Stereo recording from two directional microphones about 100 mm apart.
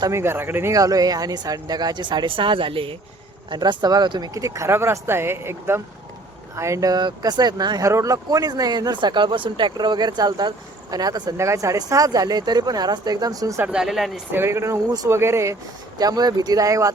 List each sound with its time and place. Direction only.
0.1 s speech: 25° right (ahead or behind)
0.7 s speech: 35° right (ahead or behind); by 2.9 s 60° right (ahead or behind)
3.5 s speech: 50° right (ahead or behind)
4.4 s speech: 30° right (ahead or behind)
7.9 s speech: 30° right (ahead or behind)
13.7 s speech: 5° right (ahead or behind)
14.3 s speech: 25° right (ahead or behind)
16.0 s speech: 40° right (ahead or behind)